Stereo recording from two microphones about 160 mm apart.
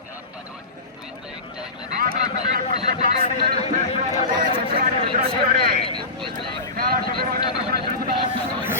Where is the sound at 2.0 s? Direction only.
65° right (ahead or behind).